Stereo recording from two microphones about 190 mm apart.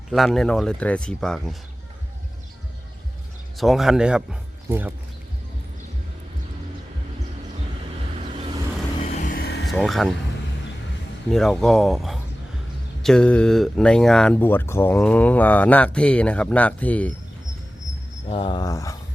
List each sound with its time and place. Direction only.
0.1 s speech: centre (ahead or behind)
3.6 s speech: centre (ahead or behind)
9.1 s vehicle: 45° left (ahead or behind)
9.6 s speech: centre (ahead or behind)
11.3 s speech: centre (ahead or behind)
18.3 s speech: 30° left (ahead or behind)